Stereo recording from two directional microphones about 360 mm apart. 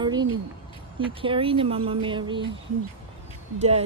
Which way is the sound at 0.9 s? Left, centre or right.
Centre.